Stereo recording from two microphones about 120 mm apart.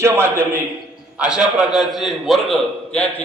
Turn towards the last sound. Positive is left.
turn(degrees=10)  # may be behind; listen again after turning